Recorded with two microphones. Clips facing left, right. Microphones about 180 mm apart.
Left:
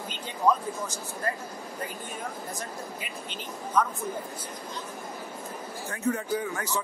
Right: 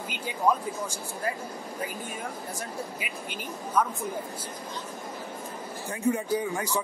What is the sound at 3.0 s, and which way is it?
Speech, 10° right (ahead or behind).